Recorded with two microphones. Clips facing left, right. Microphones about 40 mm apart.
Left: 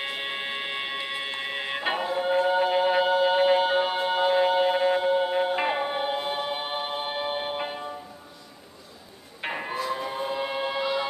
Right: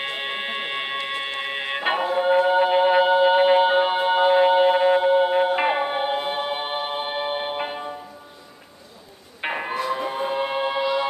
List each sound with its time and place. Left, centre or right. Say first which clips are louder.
0.0 s music: right 3 dB; centre
9.4 s a sound: right 5 dB; centre
9.8 s music: right 5 dB; right